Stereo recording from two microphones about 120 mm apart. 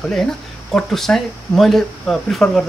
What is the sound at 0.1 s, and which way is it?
Speech, 5° left (ahead or behind).